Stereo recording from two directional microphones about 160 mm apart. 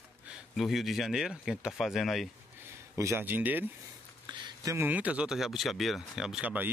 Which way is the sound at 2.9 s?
15° right (ahead or behind).